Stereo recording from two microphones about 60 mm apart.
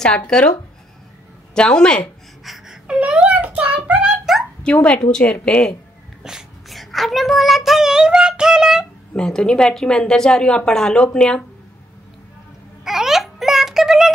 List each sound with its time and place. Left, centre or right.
1.5 s a woman's voice: centre
2.4 s wail: centre
3.0 s a child's voice: centre
4.3 s a sound: centre
4.7 s a woman's voice: left
6.2 s child singing: centre
9.1 s a woman's voice: centre
12.8 s a sound: centre